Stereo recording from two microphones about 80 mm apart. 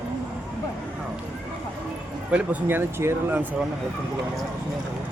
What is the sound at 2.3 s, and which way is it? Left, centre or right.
Speech, right.